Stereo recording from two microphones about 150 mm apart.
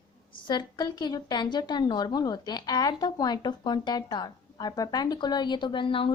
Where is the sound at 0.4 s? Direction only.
30° left (ahead or behind).